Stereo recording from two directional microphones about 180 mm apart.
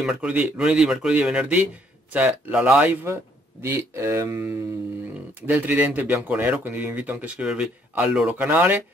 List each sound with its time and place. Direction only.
0.0 s speech: 5° right (ahead or behind)